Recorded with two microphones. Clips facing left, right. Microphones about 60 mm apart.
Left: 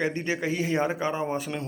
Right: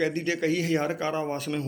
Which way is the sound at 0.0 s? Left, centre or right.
Left.